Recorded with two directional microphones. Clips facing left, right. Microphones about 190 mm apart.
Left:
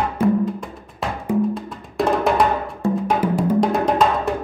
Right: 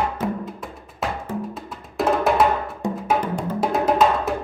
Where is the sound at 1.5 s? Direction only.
Centre (ahead or behind).